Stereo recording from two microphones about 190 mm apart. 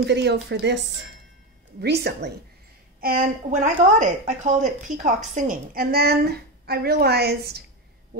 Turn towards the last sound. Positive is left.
turn(degrees=-55)  # may be behind; listen again after turning